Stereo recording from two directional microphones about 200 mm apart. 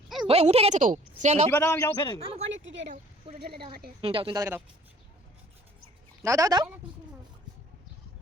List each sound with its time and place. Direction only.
0.3 s a woman's voice: 30° right (ahead or behind)
1.5 s a man's voice: 10° left (ahead or behind)
2.1 s a woman's voice: 30° right (ahead or behind)
2.5 s a sound: 70° right (ahead or behind)
3.7 s a woman's voice: 50° right (ahead or behind)
4.0 s speech: 25° right (ahead or behind)
6.2 s speech: 15° right (ahead or behind)